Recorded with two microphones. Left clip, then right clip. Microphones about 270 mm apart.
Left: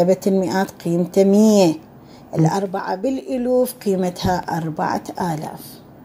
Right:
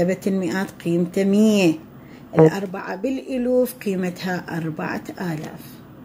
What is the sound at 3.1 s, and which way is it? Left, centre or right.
Speech, left.